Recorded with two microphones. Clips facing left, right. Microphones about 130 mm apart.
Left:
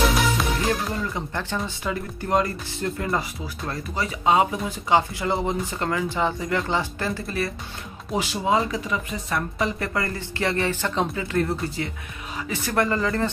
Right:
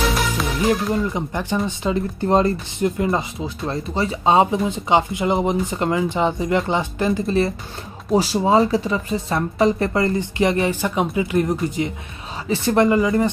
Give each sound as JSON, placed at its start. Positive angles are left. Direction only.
{"t": 0.7, "sound": "speech", "side_deg": -15}
{"t": 1.8, "sound": "speech", "side_deg": -25}